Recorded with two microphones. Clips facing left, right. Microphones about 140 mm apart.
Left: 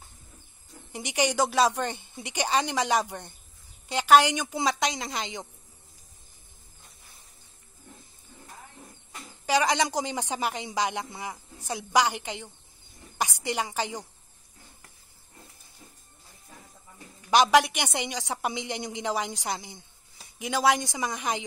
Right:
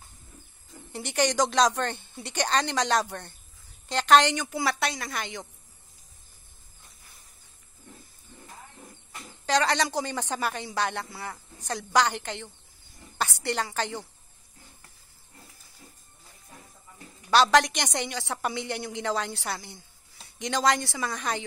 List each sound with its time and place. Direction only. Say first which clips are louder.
0.9 s a man's voice: right 1 dB; 15° left (ahead or behind)
9.5 s a man's voice: even; 10° left (ahead or behind)
17.3 s a man's voice: even; 15° left (ahead or behind)